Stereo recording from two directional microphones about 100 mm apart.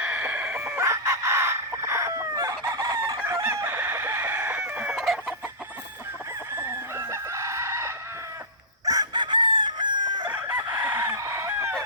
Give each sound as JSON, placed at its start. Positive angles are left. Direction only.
{"t": 0.0, "sound": "chicken", "side_deg": -15}
{"t": 0.8, "sound": "chicken", "side_deg": -30}
{"t": 4.9, "sound": "chicken", "side_deg": -5}
{"t": 6.6, "sound": "chicken", "side_deg": -25}
{"t": 8.8, "sound": "chicken", "side_deg": -40}
{"t": 10.3, "sound": "chicken", "side_deg": -20}
{"t": 11.1, "sound": "chicken", "side_deg": -30}